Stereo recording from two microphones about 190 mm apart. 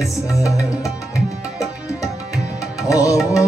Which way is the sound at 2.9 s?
15° left (ahead or behind).